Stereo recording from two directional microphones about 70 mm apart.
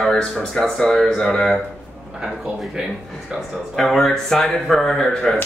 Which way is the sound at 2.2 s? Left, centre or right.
Centre.